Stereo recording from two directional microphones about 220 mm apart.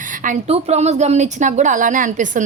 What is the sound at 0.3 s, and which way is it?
A woman's voice, 30° right (ahead or behind).